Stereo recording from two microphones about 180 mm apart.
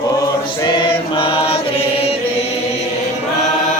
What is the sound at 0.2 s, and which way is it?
Chant, 20° left (ahead or behind).